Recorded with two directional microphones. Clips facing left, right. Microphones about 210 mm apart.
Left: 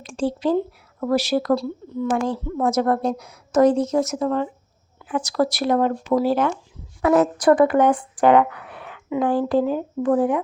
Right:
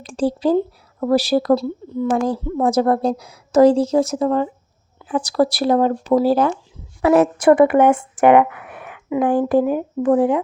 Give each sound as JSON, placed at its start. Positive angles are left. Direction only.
{"t": 0.0, "sound": "a woman's voice", "side_deg": -35}
{"t": 9.0, "sound": "speech", "side_deg": -5}
{"t": 9.3, "sound": "speech", "side_deg": -15}
{"t": 10.2, "sound": "speech", "side_deg": -30}